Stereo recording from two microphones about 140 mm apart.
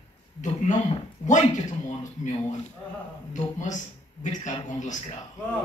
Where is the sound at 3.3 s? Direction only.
60° left (ahead or behind).